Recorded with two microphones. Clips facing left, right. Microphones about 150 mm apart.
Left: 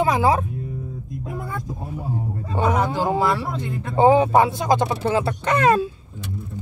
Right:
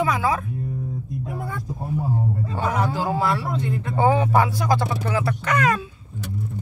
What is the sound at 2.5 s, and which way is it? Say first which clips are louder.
Speech: left 5 dB; 20° left (ahead or behind).